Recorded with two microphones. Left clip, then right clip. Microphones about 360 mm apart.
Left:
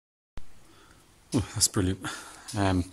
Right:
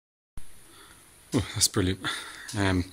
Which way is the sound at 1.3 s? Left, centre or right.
Centre.